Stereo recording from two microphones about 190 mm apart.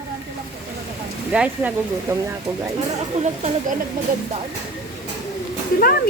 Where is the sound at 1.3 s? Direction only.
5° right (ahead or behind).